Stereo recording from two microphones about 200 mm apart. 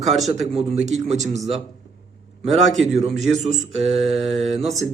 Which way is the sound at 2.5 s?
Centre (ahead or behind).